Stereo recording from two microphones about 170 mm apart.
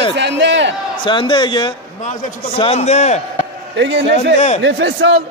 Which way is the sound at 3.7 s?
90° right.